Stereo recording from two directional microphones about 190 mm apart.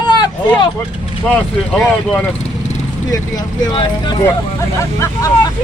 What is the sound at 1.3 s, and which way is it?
Speech, 5° left (ahead or behind).